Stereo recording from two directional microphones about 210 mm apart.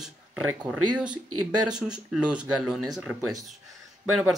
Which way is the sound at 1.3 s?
90° right.